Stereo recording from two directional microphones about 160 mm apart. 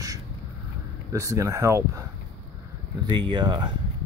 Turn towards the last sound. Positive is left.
turn(degrees=-30)  # may be behind; listen again after turning